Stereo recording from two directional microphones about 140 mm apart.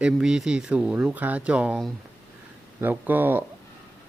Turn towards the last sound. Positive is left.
turn(degrees=-15)  # may be behind; listen again after turning